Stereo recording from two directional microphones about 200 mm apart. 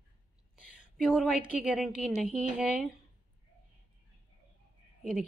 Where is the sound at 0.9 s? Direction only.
Centre (ahead or behind).